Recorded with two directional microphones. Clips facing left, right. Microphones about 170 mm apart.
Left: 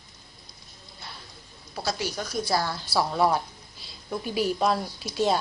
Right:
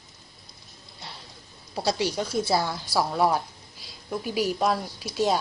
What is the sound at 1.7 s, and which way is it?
A woman's voice, 30° right (ahead or behind).